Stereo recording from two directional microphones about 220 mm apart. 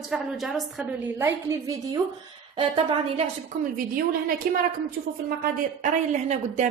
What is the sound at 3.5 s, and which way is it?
A woman's voice, 30° right (ahead or behind).